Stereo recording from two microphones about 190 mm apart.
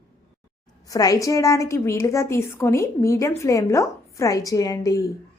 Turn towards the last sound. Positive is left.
turn(degrees=20)  # may be behind; listen again after turning